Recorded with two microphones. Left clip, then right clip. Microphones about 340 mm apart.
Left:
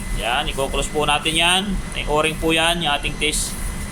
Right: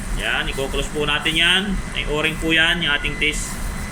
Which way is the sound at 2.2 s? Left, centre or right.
Left.